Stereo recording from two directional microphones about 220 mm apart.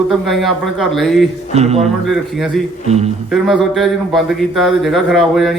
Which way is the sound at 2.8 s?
30° right (ahead or behind).